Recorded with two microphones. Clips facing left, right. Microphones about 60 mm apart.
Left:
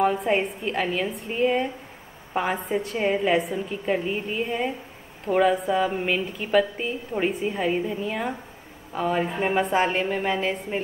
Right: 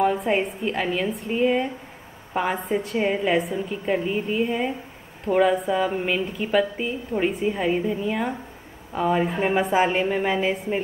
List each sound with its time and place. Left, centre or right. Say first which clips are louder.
0.0 s a woman's voice: right 1 dB; centre